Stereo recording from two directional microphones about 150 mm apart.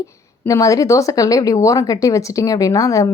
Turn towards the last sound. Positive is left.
turn(degrees=20)  # may be behind; listen again after turning